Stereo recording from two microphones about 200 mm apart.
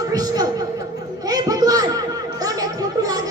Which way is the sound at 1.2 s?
20° right (ahead or behind).